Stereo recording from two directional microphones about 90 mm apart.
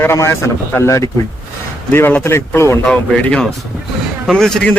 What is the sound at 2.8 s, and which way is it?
Speech, 10° left (ahead or behind).